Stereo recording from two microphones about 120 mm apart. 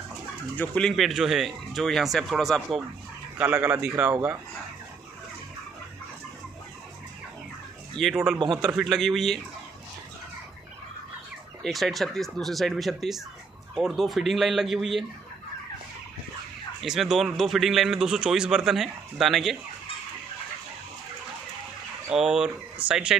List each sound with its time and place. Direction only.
0.6 s speech: 5° left (ahead or behind)
3.3 s speech: 15° right (ahead or behind)
8.0 s speech: 5° right (ahead or behind)
11.6 s speech: centre (ahead or behind)
16.8 s speech: centre (ahead or behind)
22.1 s speech: 5° right (ahead or behind)